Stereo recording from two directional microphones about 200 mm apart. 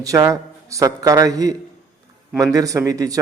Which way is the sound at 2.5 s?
15° right (ahead or behind).